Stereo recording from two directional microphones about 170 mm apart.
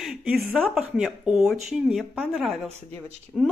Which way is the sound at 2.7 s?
40° right (ahead or behind).